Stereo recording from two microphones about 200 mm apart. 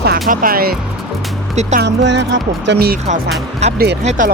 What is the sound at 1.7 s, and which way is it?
Speech, 60° right (ahead or behind).